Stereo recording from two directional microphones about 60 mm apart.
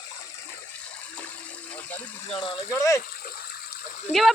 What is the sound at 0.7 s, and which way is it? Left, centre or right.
Water, left.